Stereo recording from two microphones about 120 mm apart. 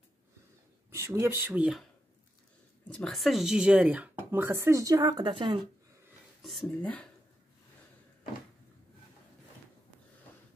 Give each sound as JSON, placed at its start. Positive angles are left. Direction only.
{"t": 0.9, "sound": "speech", "side_deg": -25}
{"t": 2.9, "sound": "speech", "side_deg": 5}
{"t": 6.4, "sound": "speech", "side_deg": 5}